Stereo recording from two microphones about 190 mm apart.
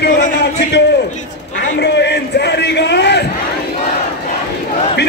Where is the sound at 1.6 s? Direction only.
65° left (ahead or behind).